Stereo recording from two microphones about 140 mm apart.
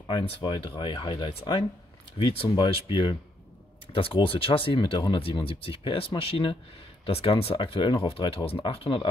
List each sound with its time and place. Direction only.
0.4 s speech: 35° left (ahead or behind)